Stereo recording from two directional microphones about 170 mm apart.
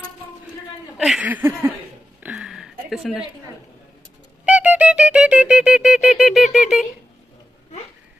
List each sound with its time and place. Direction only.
0.9 s speech: centre (ahead or behind)
2.1 s a sound: 5° right (ahead or behind)
4.5 s music: 10° right (ahead or behind)